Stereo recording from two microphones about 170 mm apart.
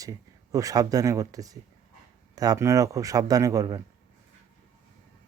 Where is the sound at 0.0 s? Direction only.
20° right (ahead or behind).